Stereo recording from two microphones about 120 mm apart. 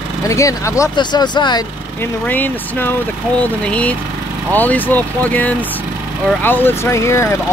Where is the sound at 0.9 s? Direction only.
40° left (ahead or behind).